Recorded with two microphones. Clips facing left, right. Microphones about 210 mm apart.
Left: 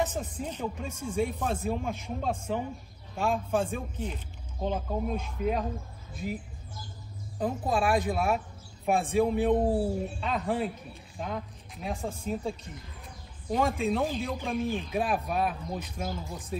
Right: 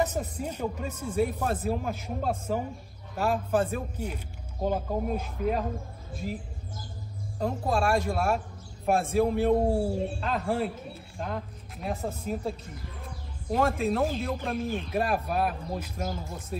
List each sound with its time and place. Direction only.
0.0 s speech: 10° right (ahead or behind)
7.3 s speech: centre (ahead or behind)
9.8 s speech: 30° right (ahead or behind)
10.2 s speech: centre (ahead or behind)